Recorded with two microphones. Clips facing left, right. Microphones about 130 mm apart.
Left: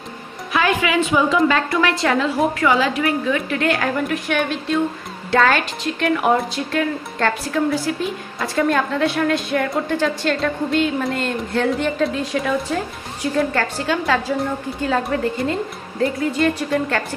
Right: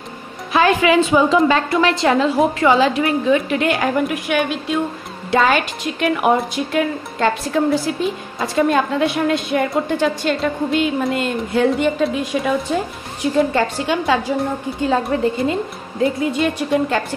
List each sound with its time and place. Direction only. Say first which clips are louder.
0.5 s a woman's voice: right 5 dB; 30° right (ahead or behind)